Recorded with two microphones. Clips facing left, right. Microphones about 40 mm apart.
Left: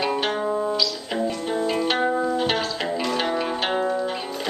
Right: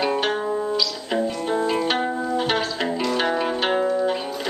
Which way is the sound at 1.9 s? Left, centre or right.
Centre.